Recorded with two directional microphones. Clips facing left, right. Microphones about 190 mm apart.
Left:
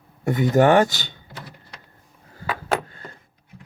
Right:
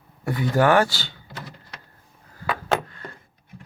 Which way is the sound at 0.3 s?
20° left (ahead or behind).